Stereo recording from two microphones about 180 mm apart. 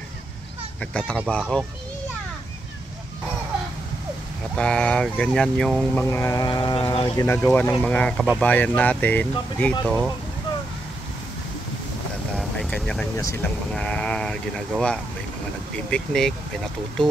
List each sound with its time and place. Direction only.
0.7 s speech: 5° left (ahead or behind)
1.4 s speech: 5° right (ahead or behind)
4.6 s speech: 5° left (ahead or behind)
6.0 s speech: 15° left (ahead or behind)
7.2 s speech: 10° left (ahead or behind)
12.4 s vehicle: 5° left (ahead or behind)
13.2 s speech: 10° left (ahead or behind)